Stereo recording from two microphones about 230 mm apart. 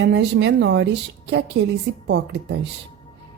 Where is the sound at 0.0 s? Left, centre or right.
Right.